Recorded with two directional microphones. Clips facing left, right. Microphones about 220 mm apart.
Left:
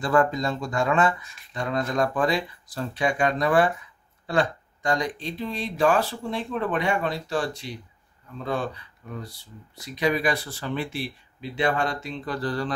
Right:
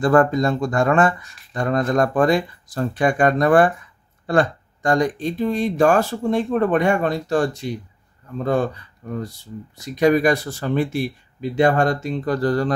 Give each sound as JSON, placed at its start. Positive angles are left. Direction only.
{"t": 0.0, "sound": "speech", "side_deg": -50}
{"t": 1.2, "sound": "speech", "side_deg": 0}
{"t": 1.5, "sound": "speech", "side_deg": -50}